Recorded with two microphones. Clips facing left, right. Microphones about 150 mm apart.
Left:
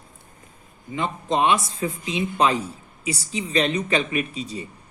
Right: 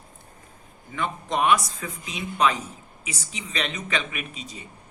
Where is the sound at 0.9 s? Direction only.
25° left (ahead or behind).